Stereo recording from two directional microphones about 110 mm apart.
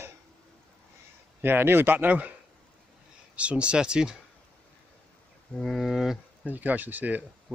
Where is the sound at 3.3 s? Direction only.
10° right (ahead or behind).